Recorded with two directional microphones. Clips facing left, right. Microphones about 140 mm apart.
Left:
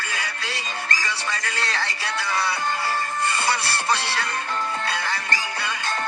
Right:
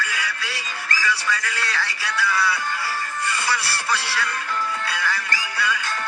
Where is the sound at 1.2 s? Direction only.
35° left (ahead or behind).